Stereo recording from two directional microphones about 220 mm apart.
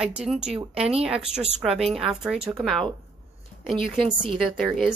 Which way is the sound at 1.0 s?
5° right (ahead or behind).